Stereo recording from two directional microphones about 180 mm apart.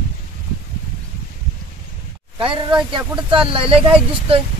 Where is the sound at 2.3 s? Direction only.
25° right (ahead or behind).